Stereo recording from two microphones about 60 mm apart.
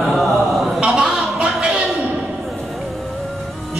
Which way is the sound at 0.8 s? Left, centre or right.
Centre.